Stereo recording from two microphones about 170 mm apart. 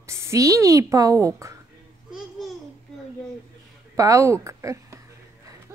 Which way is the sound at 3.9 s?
20° right (ahead or behind).